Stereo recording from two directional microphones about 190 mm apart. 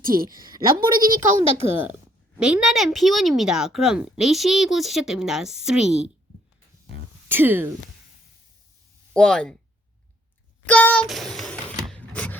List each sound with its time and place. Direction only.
0.0 s a woman's voice: 50° right (ahead or behind)
0.3 s a woman's voice: 20° right (ahead or behind)
0.7 s a woman's voice: 50° right (ahead or behind)
2.4 s a woman's voice: 5° right (ahead or behind)
7.3 s speech: 10° right (ahead or behind)
9.1 s a woman's voice: 5° left (ahead or behind)
10.7 s a sound: 10° left (ahead or behind)